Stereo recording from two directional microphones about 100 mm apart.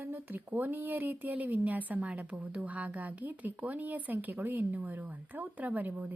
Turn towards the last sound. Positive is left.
turn(degrees=-15)  # may be behind; listen again after turning